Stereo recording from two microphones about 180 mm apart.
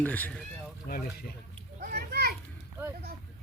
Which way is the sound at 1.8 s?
60° right (ahead or behind).